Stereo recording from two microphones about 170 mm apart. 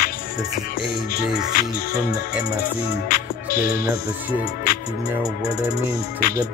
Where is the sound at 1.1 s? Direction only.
60° left (ahead or behind).